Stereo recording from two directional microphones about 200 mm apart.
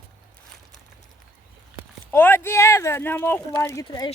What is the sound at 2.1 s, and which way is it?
Speech, 10° left (ahead or behind).